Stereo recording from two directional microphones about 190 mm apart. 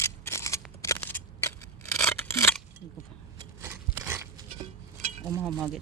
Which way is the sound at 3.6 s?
10° right (ahead or behind).